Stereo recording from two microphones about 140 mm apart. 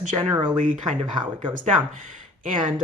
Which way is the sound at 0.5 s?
65° right (ahead or behind).